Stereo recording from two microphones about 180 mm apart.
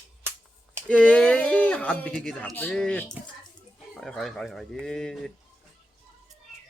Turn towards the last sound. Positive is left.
turn(degrees=0)  # may be behind; listen again after turning